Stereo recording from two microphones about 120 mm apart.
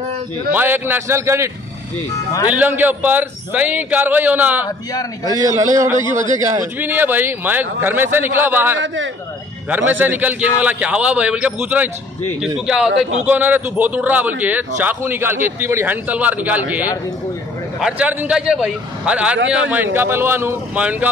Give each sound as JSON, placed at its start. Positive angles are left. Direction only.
{"t": 0.5, "sound": "a man's voice", "side_deg": -15}
{"t": 2.5, "sound": "a man's voice", "side_deg": -15}
{"t": 5.5, "sound": "a man's voice", "side_deg": -25}
{"t": 6.8, "sound": "a man's voice", "side_deg": -15}